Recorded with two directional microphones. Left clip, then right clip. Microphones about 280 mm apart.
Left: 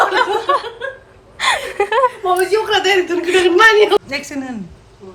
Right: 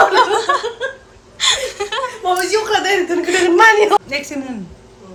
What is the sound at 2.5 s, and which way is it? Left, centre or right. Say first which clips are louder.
Chuckle: left 1 dB; right.